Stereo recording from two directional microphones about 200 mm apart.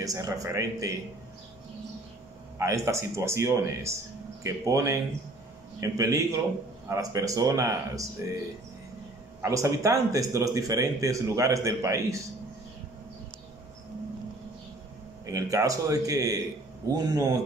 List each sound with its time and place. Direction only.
0.0 s speech: 15° right (ahead or behind)
2.6 s speech: 15° right (ahead or behind)
9.4 s speech: 15° right (ahead or behind)
15.2 s speech: 15° right (ahead or behind)